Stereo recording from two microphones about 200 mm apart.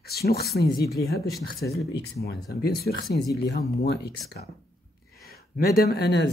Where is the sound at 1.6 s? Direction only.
55° left (ahead or behind).